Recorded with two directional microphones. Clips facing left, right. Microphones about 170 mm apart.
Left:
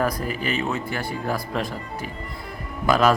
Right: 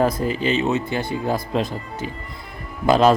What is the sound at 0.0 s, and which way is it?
Speech, 25° right (ahead or behind).